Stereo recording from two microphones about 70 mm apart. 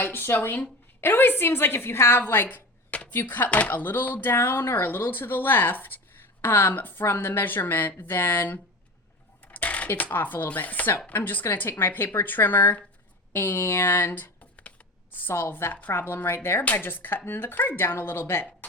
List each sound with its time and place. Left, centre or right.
0.0 s speech: left
2.9 s a sound: centre
3.2 s speech: left
9.5 s chopping: left
11.1 s a woman's voice: left